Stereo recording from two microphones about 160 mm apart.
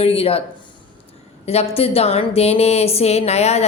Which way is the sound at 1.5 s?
40° left (ahead or behind).